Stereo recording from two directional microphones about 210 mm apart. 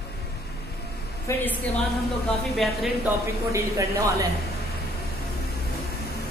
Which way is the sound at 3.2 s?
15° right (ahead or behind).